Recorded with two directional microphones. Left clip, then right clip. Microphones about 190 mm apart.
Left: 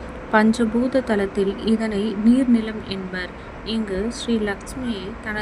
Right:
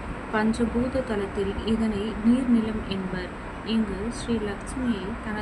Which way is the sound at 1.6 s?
40° left (ahead or behind).